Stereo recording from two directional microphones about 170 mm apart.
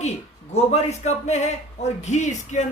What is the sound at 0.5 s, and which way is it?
A man's voice, 40° left (ahead or behind).